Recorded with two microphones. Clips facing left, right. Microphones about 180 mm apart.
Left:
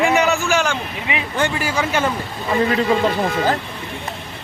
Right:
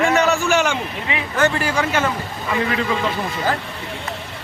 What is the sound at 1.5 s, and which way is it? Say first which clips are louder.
Speech: even; 10° left (ahead or behind).